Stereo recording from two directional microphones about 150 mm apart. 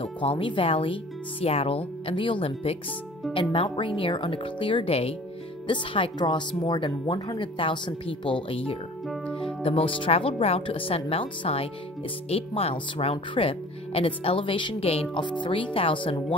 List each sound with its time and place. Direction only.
0.0 s speech: 35° left (ahead or behind)